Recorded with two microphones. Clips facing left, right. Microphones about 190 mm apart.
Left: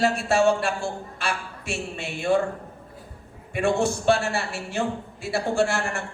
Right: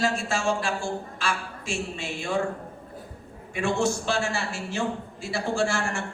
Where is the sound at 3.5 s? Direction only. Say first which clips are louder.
Left 2 dB; 55° left (ahead or behind).